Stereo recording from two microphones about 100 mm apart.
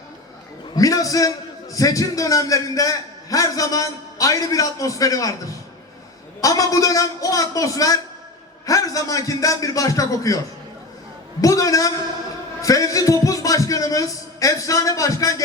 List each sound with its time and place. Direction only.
0.8 s a man's voice: 35° left (ahead or behind)
6.4 s a man's voice: 35° left (ahead or behind)